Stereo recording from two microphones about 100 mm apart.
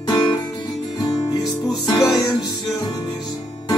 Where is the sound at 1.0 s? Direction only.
40° left (ahead or behind).